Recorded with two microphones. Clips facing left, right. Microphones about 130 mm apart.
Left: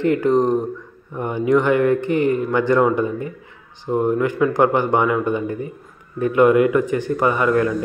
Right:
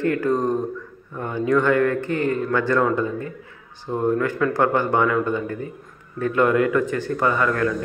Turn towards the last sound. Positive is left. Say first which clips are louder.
# left 3 dB
turn(degrees=20)  # may be behind; listen again after turning